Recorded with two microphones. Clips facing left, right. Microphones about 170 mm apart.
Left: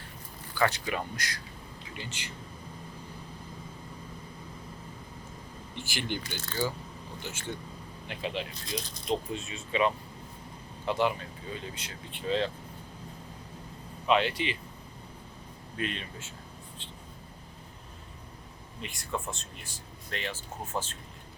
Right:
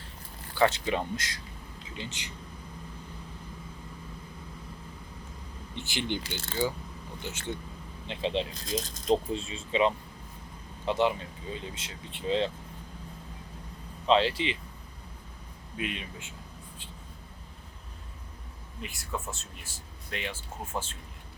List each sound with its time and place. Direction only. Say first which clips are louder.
0.6 s speech: right 3 dB; 25° right (ahead or behind)
5.7 s speech: right 2 dB; 20° right (ahead or behind)
8.6 s speech: right 4 dB; 45° right (ahead or behind)
9.0 s speech: right 5 dB; 30° right (ahead or behind)
14.1 s speech: right 2 dB; 30° right (ahead or behind)
15.8 s speech: even; 10° right (ahead or behind)
18.8 s speech: left 1 dB; 5° right (ahead or behind)